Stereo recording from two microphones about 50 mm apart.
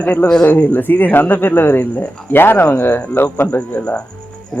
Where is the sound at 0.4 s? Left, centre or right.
Left.